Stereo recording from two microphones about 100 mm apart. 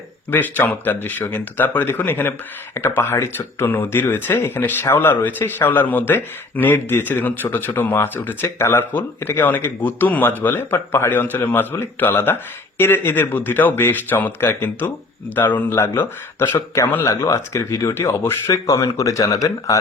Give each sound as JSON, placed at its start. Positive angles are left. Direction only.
{"t": 0.3, "sound": "speech", "side_deg": 20}